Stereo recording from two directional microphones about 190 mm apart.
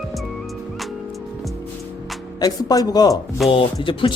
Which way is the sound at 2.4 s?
20° left (ahead or behind).